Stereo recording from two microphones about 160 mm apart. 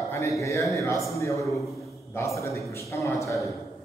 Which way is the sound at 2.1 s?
20° left (ahead or behind).